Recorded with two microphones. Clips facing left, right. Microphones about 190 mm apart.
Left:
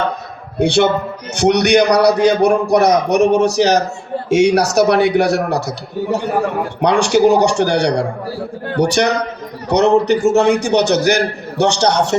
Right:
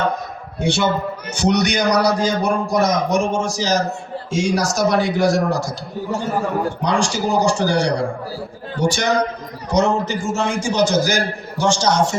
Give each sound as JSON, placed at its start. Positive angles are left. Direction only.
{"t": 0.6, "sound": "a man's voice", "side_deg": 65}